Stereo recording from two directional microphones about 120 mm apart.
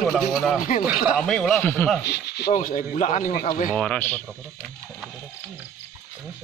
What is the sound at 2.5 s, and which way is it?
Speech, 90° left.